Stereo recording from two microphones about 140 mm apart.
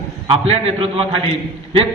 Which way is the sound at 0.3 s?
45° right (ahead or behind).